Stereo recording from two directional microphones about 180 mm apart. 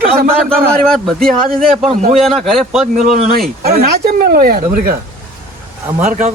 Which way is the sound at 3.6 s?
60° right (ahead or behind).